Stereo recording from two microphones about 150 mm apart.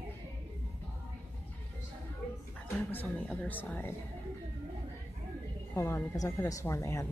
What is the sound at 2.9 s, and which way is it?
Speech, 10° left (ahead or behind).